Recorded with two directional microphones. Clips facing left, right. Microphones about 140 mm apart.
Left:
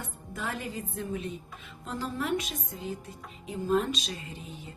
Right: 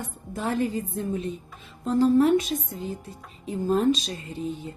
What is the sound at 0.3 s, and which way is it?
Speech, 35° right (ahead or behind).